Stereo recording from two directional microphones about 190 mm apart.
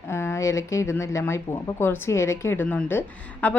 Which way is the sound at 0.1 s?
15° left (ahead or behind).